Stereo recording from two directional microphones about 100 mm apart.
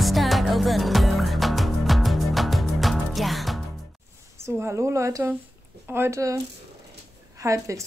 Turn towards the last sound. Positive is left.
turn(degrees=-30)  # may be behind; listen again after turning